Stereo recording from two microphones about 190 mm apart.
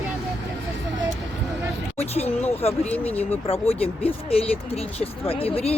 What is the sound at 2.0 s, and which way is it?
Speech, 35° left (ahead or behind).